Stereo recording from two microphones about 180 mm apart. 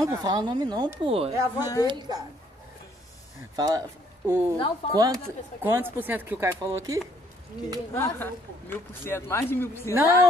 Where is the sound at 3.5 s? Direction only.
20° right (ahead or behind).